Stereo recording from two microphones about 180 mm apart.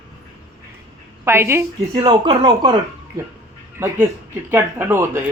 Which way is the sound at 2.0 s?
25° right (ahead or behind).